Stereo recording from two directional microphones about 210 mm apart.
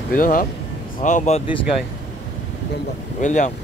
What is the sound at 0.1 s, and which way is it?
Speech, 40° left (ahead or behind).